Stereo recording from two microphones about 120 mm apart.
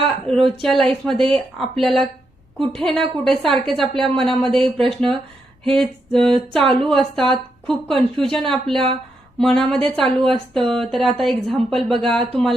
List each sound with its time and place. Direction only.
0.3 s a woman's voice: 55° right (ahead or behind)
0.6 s a woman's voice: 5° left (ahead or behind)
7.9 s speech: 45° right (ahead or behind)
8.2 s a woman's voice: 5° left (ahead or behind)